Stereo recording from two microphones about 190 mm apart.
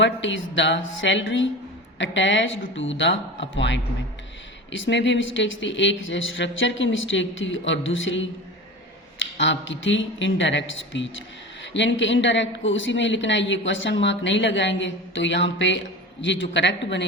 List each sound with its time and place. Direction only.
0.0 s a woman's voice: 80° left